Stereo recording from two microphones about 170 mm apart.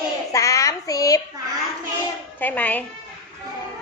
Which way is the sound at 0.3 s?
20° left (ahead or behind).